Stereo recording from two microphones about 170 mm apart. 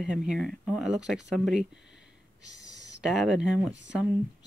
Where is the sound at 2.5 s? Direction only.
90° right.